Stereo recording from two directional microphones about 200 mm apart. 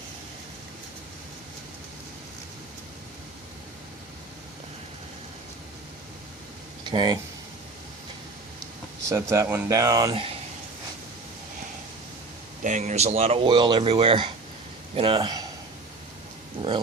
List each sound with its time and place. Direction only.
6.8 s speech: 20° right (ahead or behind)
9.0 s speech: 15° right (ahead or behind)
12.6 s speech: 40° right (ahead or behind); by 15.4 s 20° right (ahead or behind)
16.6 s dog: 25° right (ahead or behind)